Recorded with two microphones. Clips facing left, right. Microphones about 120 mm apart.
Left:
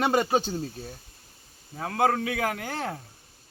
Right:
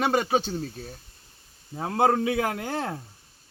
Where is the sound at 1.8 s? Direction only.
25° right (ahead or behind).